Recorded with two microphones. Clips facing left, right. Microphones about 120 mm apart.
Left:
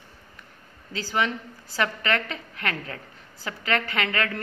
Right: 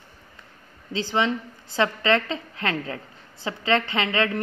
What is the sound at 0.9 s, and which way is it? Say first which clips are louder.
Speech: right 3 dB; 25° right (ahead or behind).